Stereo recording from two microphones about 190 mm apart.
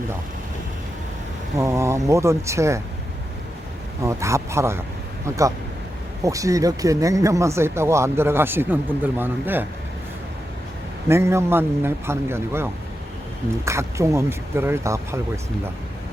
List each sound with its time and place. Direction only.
1.5 s speech: 15° right (ahead or behind)
4.0 s speech: 15° right (ahead or behind)
11.1 s speech: 15° right (ahead or behind)
13.7 s speech: 15° right (ahead or behind)